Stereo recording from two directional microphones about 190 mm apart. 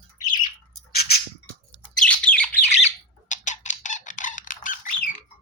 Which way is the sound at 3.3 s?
40° left (ahead or behind).